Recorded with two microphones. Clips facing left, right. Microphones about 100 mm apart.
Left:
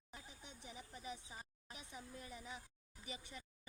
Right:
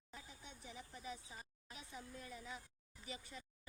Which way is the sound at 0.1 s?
20° left (ahead or behind).